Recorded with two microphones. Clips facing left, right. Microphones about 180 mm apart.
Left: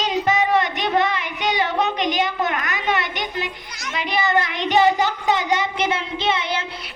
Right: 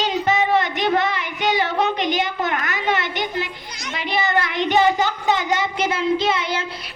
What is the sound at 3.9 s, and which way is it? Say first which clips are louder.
Children playing: left 1 dB; 30° right (ahead or behind).